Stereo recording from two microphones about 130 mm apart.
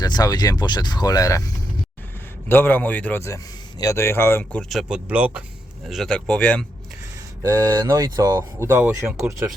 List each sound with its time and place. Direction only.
0.0 s speech: 30° left (ahead or behind)
2.5 s a man's voice: 15° left (ahead or behind)
4.7 s speech: 5° right (ahead or behind)
5.9 s speech: centre (ahead or behind)
7.4 s speech: 20° right (ahead or behind)